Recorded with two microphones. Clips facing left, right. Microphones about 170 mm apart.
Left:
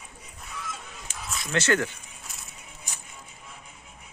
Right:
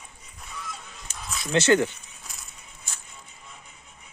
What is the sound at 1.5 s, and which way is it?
Speech, 25° right (ahead or behind).